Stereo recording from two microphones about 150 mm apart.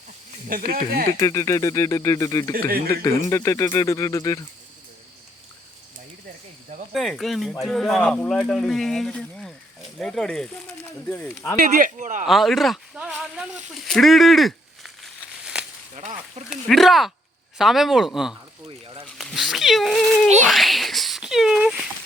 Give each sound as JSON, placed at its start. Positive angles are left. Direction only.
{"t": 0.4, "sound": "speech", "side_deg": -75}
{"t": 1.1, "sound": "speech", "side_deg": 20}
{"t": 2.5, "sound": "speech", "side_deg": -80}
{"t": 2.9, "sound": "speech", "side_deg": 20}
{"t": 6.9, "sound": "speech", "side_deg": 0}
{"t": 11.5, "sound": "speech", "side_deg": -70}
{"t": 12.2, "sound": "speech", "side_deg": 0}
{"t": 13.7, "sound": "a sound", "side_deg": 0}
{"t": 16.0, "sound": "speech", "side_deg": -50}
{"t": 16.5, "sound": "speech", "side_deg": 0}